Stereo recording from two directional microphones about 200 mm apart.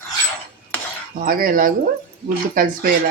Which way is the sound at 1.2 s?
45° right (ahead or behind).